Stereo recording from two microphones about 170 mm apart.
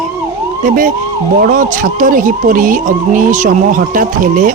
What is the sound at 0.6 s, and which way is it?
Speech, 55° right (ahead or behind).